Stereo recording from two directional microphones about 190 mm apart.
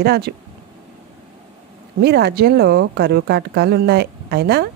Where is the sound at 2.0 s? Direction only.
60° right (ahead or behind).